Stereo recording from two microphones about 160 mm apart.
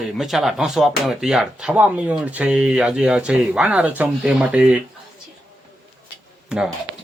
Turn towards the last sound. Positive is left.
turn(degrees=-5)  # may be behind; listen again after turning